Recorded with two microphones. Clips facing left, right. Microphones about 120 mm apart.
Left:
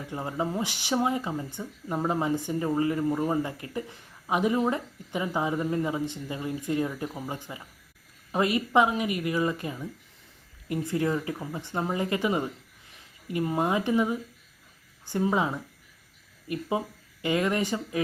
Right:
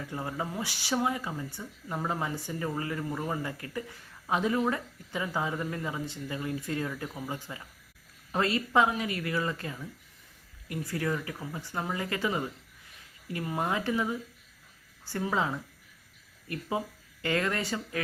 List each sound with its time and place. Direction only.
0.1 s speech: 20° left (ahead or behind)